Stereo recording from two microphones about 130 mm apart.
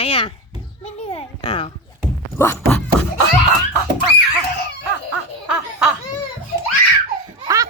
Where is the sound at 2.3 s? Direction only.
20° left (ahead or behind).